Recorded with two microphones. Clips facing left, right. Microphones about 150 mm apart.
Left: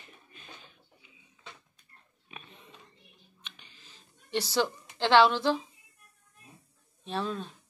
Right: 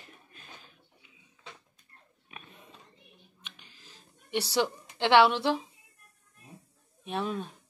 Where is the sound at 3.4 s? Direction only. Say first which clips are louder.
Left 2 dB; 5° right (ahead or behind).